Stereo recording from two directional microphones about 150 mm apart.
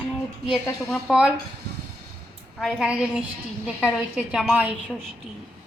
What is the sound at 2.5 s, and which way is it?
A woman's voice, 5° right (ahead or behind).